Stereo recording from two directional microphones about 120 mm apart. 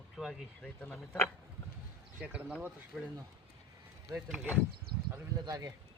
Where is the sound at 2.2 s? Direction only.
10° right (ahead or behind).